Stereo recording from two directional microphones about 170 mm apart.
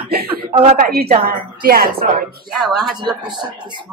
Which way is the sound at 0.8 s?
60° right (ahead or behind).